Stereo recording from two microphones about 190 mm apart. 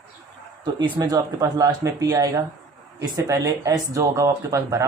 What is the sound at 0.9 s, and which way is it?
Speech, 20° right (ahead or behind).